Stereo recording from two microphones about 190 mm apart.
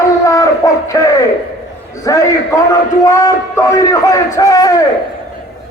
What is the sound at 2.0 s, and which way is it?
A man's voice, 15° left (ahead or behind).